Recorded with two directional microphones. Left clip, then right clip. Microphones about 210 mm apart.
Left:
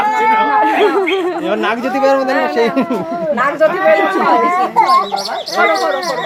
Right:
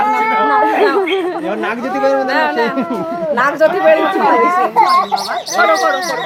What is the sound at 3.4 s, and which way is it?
Speech, 20° right (ahead or behind).